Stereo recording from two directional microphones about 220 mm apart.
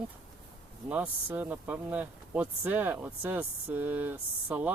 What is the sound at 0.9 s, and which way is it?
Speech, 10° right (ahead or behind).